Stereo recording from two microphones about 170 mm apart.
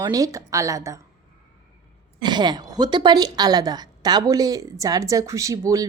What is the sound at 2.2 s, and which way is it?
A woman's voice, 25° right (ahead or behind).